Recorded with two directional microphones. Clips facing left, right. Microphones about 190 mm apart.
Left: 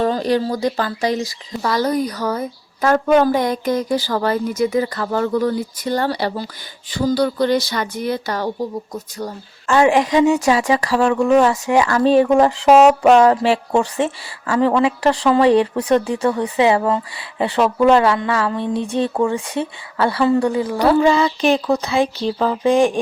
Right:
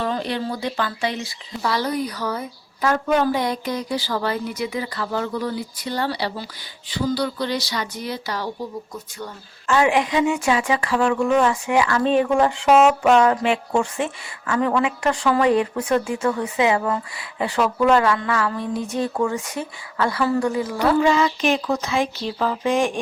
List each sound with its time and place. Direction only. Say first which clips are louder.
0.0 s speech: left 7 dB; 40° left (ahead or behind)
8.9 s speech: left 6 dB; 40° left (ahead or behind)